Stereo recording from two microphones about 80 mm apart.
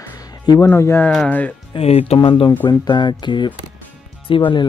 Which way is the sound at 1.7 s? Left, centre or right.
Left.